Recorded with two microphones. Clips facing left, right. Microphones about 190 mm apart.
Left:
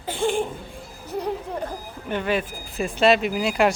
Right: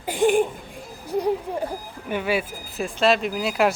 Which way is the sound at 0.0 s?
15° right (ahead or behind).